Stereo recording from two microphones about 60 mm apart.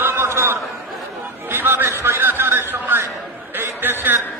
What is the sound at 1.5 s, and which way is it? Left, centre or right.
Music, right.